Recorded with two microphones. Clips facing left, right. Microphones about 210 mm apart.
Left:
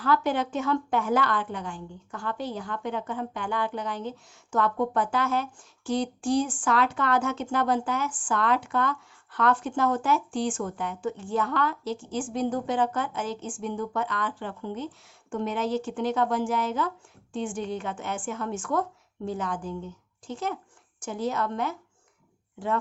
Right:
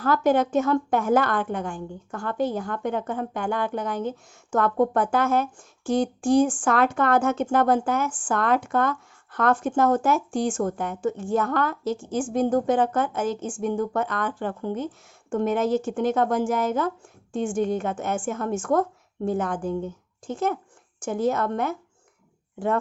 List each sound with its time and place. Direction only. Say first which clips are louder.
0.0 s speech: right 5 dB; 45° right (ahead or behind)